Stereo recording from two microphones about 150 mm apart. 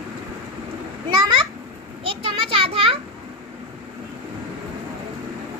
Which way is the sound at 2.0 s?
35° right (ahead or behind).